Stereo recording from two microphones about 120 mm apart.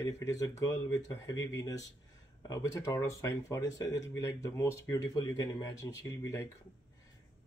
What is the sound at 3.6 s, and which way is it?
Speech, 35° left (ahead or behind).